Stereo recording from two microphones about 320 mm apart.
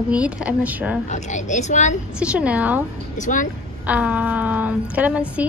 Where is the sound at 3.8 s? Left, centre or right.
Centre.